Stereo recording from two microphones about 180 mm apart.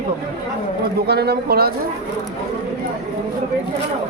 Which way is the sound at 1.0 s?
65° right (ahead or behind).